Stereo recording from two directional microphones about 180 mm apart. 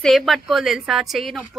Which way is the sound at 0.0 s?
Centre (ahead or behind).